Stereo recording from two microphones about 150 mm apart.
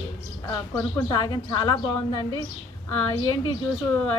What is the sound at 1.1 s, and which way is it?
Speech, 30° left (ahead or behind).